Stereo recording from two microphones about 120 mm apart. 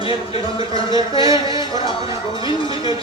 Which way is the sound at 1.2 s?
30° right (ahead or behind).